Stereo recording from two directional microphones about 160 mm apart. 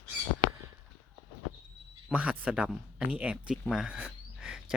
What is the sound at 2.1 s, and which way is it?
Speech, 10° right (ahead or behind).